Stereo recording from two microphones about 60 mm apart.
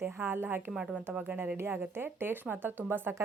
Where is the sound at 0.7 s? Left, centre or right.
Centre.